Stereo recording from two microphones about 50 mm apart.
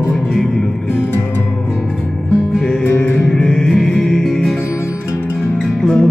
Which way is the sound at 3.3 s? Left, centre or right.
Centre.